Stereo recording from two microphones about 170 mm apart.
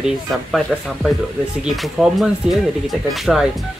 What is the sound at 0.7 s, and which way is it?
Speech, 5° left (ahead or behind).